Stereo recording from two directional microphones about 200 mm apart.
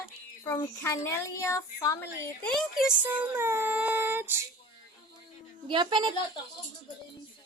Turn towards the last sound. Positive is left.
turn(degrees=-20)  # may be behind; listen again after turning